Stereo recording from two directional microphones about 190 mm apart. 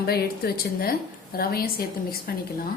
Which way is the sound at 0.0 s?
55° left (ahead or behind).